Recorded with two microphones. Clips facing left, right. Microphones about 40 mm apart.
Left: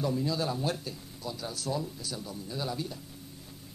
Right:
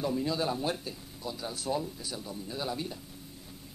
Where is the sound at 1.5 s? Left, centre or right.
Right.